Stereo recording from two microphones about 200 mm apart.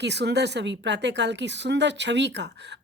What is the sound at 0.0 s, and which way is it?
A woman's voice, 60° right (ahead or behind).